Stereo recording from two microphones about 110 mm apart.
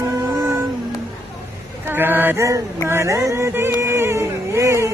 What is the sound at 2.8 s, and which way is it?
Music, 25° right (ahead or behind).